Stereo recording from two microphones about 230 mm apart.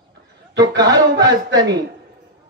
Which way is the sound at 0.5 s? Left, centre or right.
Centre.